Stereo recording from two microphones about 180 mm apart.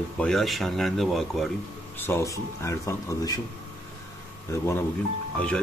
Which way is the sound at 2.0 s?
15° left (ahead or behind).